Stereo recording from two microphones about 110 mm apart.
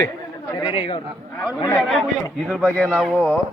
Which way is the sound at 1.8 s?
Centre (ahead or behind).